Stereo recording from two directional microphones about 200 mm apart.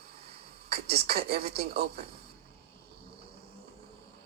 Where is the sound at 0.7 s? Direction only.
50° right (ahead or behind).